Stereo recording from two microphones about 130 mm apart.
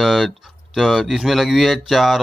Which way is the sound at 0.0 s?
Centre (ahead or behind).